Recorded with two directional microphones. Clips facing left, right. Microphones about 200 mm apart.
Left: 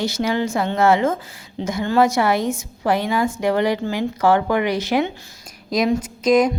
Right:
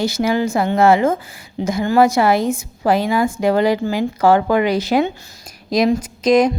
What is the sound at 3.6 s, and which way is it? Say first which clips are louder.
Speech: right 3 dB; 90° right.